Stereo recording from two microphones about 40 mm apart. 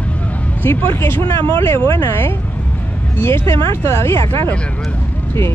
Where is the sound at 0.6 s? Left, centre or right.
Left.